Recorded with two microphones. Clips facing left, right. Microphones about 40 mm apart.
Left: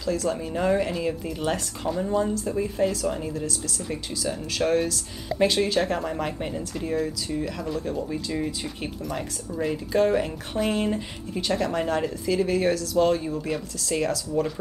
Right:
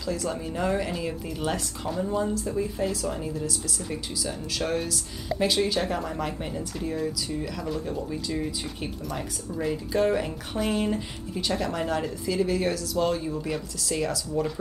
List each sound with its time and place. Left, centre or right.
0.0 s speech: centre
5.9 s speech: centre
8.1 s speech: centre